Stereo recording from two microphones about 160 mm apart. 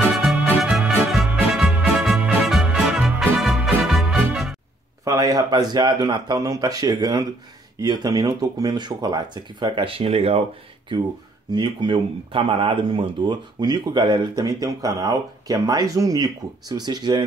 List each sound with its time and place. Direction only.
0.2 s music: centre (ahead or behind)
5.0 s speech: 20° right (ahead or behind); by 10.4 s 40° right (ahead or behind)
11.5 s speech: 30° right (ahead or behind)